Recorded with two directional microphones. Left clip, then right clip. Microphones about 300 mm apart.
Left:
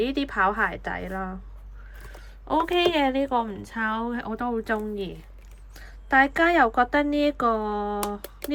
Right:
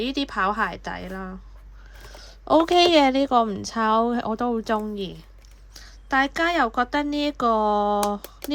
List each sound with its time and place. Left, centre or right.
0.0 s a woman's voice: centre
2.0 s a sound: centre
2.5 s a woman's voice: centre